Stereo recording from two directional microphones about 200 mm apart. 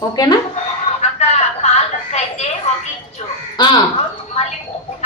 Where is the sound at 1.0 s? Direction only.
35° left (ahead or behind).